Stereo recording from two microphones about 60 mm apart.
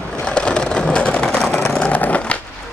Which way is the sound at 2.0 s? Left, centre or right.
Left.